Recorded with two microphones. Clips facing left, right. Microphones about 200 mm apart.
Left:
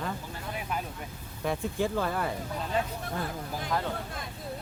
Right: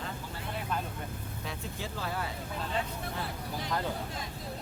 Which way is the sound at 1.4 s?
55° left (ahead or behind).